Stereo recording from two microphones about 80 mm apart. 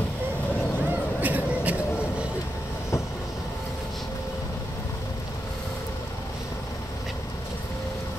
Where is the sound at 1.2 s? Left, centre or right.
Centre.